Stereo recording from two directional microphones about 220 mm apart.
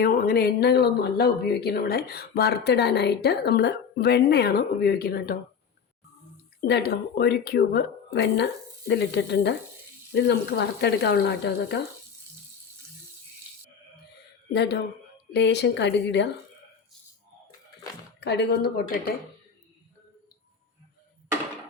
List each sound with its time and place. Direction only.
0.0 s speech: 45° left (ahead or behind)
6.6 s speech: 50° left (ahead or behind)
14.5 s speech: 50° left (ahead or behind)
18.2 s speech: 50° left (ahead or behind)